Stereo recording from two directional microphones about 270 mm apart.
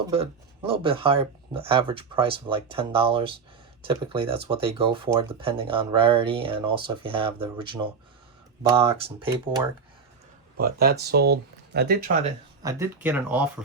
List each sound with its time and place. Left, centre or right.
0.1 s speech: right
10.6 s speech: right
12.6 s speech: centre